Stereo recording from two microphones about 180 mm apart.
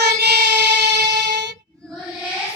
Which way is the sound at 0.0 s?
65° right (ahead or behind).